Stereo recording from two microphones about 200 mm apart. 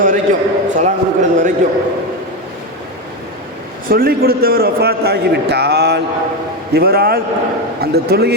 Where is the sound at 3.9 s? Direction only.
50° right (ahead or behind).